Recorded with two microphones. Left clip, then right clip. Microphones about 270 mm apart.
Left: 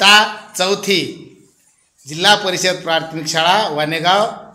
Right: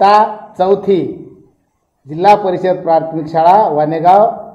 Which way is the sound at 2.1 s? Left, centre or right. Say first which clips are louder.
Right 4 dB; left.